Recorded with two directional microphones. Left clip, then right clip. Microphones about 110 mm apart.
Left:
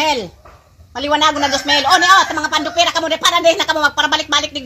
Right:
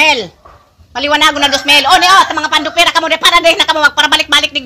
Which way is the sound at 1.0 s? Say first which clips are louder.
Right 4 dB; 25° right (ahead or behind).